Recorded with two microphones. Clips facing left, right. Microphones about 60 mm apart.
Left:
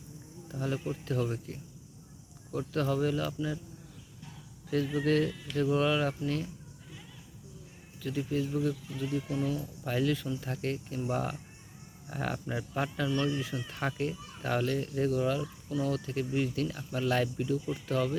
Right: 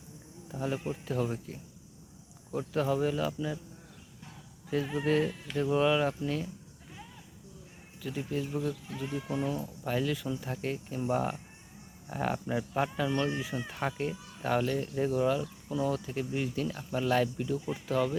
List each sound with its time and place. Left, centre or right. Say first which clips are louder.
0.4 s speech: even; centre
4.7 s speech: left 1 dB; centre
8.0 s speech: left 2 dB; centre
9.2 s speech: even; right
9.8 s speech: left 1 dB; centre
13.1 s speech: even; right
13.7 s speech: left 1 dB; centre